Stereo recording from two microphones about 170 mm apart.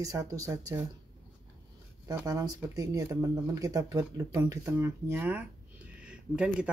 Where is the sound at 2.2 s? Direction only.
20° right (ahead or behind).